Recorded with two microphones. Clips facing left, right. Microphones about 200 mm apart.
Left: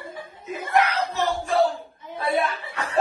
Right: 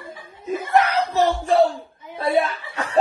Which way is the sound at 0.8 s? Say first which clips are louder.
Right 4 dB; 35° right (ahead or behind).